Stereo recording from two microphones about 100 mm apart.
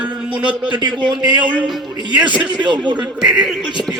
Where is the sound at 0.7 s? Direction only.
50° right (ahead or behind).